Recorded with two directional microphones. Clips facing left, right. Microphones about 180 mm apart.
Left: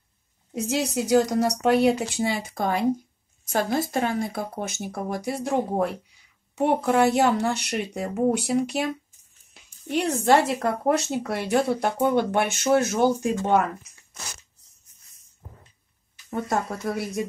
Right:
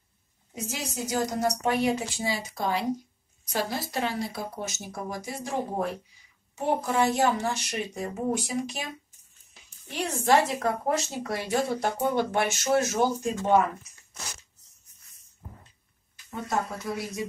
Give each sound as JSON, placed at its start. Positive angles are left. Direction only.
{"t": 0.6, "sound": "a woman's voice", "side_deg": 65}
{"t": 16.9, "sound": "speech", "side_deg": 60}